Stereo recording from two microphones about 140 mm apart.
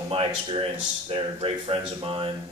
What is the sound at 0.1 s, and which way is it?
Speech, 40° right (ahead or behind).